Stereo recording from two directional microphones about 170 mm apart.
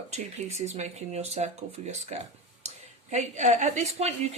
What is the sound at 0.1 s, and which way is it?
A woman's voice, 40° right (ahead or behind).